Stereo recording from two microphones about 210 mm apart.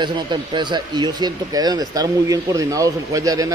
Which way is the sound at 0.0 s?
20° right (ahead or behind).